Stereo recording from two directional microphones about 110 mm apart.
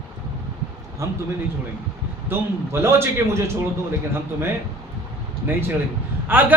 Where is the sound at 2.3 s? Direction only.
20° right (ahead or behind).